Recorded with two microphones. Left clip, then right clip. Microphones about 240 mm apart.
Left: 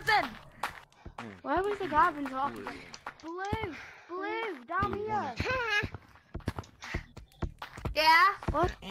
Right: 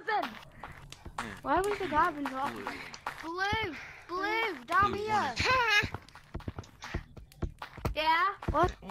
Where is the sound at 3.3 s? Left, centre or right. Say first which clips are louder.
Right 4 dB; right.